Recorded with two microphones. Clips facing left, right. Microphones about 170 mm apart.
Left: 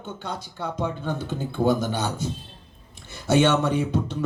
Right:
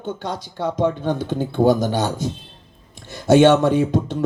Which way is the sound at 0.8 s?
80° right.